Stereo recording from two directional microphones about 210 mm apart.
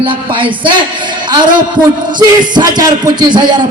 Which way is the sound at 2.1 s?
20° right (ahead or behind).